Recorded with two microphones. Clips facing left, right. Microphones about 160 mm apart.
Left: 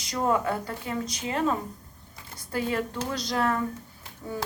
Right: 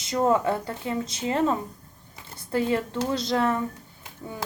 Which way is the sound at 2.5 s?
30° right (ahead or behind).